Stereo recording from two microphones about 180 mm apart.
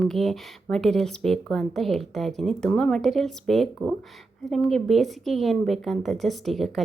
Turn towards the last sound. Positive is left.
turn(degrees=0)  # may be behind; listen again after turning